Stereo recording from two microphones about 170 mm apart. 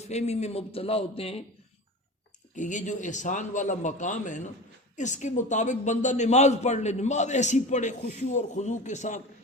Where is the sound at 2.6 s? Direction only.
45° left (ahead or behind).